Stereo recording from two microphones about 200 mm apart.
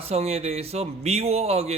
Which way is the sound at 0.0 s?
30° right (ahead or behind).